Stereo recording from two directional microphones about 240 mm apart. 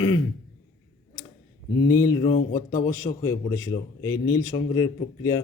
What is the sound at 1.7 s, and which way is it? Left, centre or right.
A man's voice, centre.